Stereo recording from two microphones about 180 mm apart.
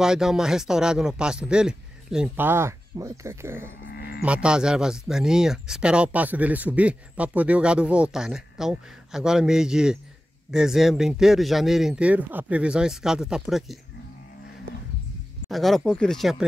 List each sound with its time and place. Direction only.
0.0 s speech: 5° right (ahead or behind)
3.9 s livestock: 60° left (ahead or behind)
4.2 s speech: 5° right (ahead or behind)
15.5 s speech: centre (ahead or behind)